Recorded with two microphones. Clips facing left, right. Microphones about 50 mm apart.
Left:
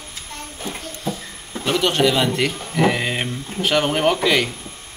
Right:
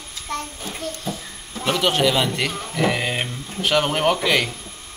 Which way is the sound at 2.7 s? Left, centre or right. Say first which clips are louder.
Left 2 dB; centre.